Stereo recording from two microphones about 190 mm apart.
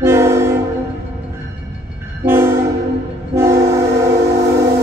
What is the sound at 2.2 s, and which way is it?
Train, 15° right (ahead or behind).